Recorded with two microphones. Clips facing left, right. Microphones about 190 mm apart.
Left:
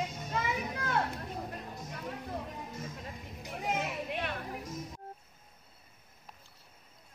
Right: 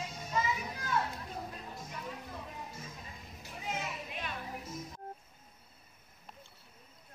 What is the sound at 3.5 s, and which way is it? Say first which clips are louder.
Children playing: left 5 dB; 60° left (ahead or behind).